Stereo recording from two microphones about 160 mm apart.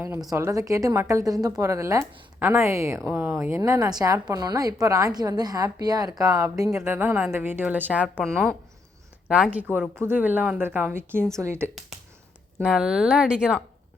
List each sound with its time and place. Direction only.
0.0 s a woman's voice: 20° right (ahead or behind)
9.3 s a woman's voice: 5° right (ahead or behind)
12.6 s speech: 5° right (ahead or behind)